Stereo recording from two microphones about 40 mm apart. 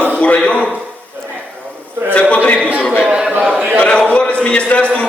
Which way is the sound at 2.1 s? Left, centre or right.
Left.